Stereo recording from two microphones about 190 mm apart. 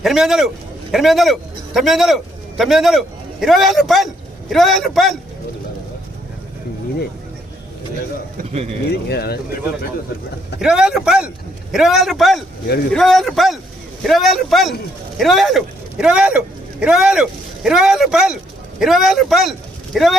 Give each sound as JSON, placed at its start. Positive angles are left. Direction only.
{"t": 0.0, "sound": "a man's voice", "side_deg": 0}
{"t": 8.9, "sound": "speech", "side_deg": 60}
{"t": 10.6, "sound": "a man's voice", "side_deg": -5}